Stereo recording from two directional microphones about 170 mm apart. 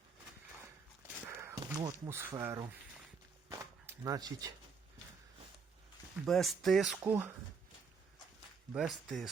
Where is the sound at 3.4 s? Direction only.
20° right (ahead or behind).